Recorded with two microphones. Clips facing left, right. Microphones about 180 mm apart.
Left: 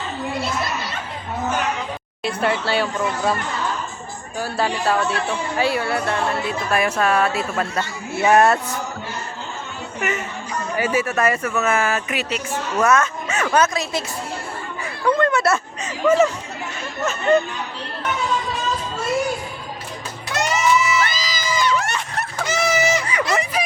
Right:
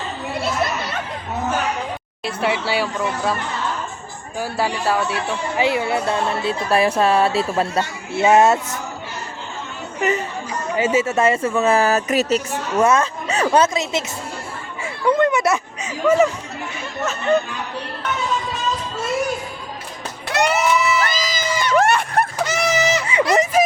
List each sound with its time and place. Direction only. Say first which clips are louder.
2.2 s speech: even; 10° right (ahead or behind)
4.4 s speech: even; 10° right (ahead or behind)
10.0 s speech: right 5 dB; 35° right (ahead or behind)
10.8 s speech: right 3 dB; 25° right (ahead or behind); by 12.4 s 40° right (ahead or behind)
12.7 s speech: right 2 dB; 30° right (ahead or behind)
15.0 s speech: right 1 dB; 20° right (ahead or behind)
20.3 s music: right 1 dB; 60° right (ahead or behind)
21.0 s a sound: right 2 dB; 45° right (ahead or behind)
22.4 s a sound: even; 10° left (ahead or behind)
23.3 s snicker: right 8 dB; 45° right (ahead or behind)